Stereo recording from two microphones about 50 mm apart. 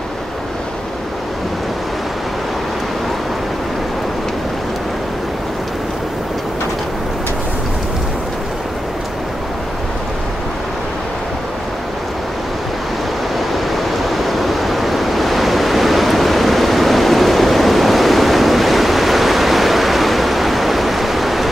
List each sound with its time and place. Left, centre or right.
13.7 s waves: centre